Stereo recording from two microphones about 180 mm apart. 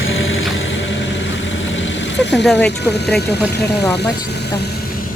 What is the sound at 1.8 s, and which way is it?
Vehicle, 75° left (ahead or behind).